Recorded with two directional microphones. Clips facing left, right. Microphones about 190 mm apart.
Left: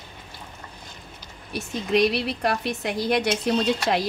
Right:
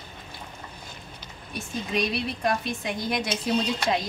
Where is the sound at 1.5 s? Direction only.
70° left (ahead or behind).